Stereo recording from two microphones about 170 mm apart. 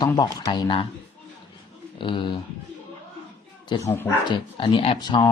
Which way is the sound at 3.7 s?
25° left (ahead or behind).